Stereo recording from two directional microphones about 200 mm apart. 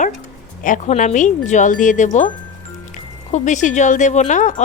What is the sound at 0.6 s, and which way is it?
A woman's voice, 40° left (ahead or behind).